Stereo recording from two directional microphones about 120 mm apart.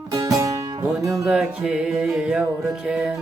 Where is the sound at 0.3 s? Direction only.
30° right (ahead or behind).